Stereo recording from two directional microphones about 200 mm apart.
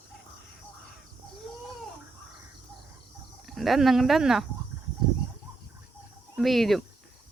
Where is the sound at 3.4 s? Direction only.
Centre (ahead or behind).